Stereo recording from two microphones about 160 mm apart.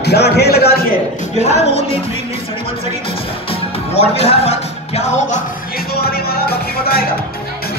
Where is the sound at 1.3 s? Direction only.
45° left (ahead or behind).